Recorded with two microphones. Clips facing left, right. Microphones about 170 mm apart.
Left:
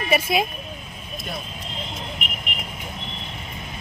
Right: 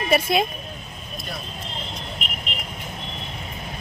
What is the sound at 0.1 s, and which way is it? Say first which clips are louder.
Speech: right 1 dB; 5° left (ahead or behind).